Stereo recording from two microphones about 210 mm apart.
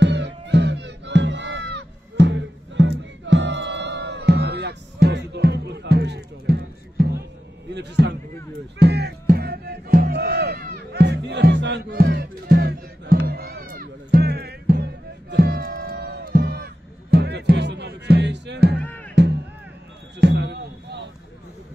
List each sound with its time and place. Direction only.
0.0 s music: 55° right (ahead or behind)
7.7 s speech: 55° right (ahead or behind)
8.7 s music: 50° right (ahead or behind)
18.8 s music: 5° left (ahead or behind)
20.2 s a sound: 55° right (ahead or behind)